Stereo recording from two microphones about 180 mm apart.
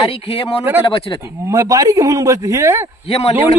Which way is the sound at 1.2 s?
15° right (ahead or behind).